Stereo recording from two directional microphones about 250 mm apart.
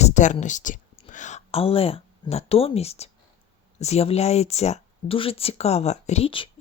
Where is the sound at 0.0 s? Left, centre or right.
Left.